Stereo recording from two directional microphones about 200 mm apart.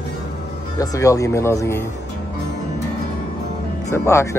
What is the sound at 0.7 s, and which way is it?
Speech, 15° left (ahead or behind).